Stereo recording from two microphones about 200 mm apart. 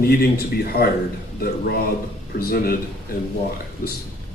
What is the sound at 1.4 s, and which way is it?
A woman's voice, 50° left (ahead or behind).